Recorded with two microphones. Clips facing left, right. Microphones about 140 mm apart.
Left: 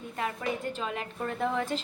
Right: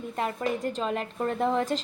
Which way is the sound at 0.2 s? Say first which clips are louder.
Right 4 dB; 35° right (ahead or behind).